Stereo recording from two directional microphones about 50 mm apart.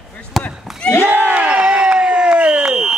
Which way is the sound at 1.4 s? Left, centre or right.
Right.